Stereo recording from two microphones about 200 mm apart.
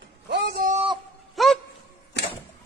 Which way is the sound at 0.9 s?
Centre (ahead or behind).